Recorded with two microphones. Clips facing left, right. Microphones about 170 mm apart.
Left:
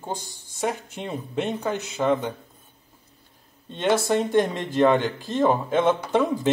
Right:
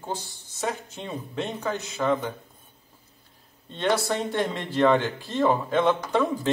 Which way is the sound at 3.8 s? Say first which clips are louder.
Left 3 dB; 15° left (ahead or behind).